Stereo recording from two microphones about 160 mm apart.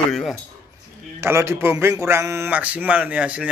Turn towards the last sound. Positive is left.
turn(degrees=-5)  # may be behind; listen again after turning